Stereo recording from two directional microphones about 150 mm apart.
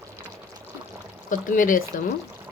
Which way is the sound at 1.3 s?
60° left (ahead or behind).